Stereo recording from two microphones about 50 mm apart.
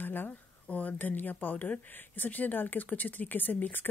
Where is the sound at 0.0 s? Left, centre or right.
Left.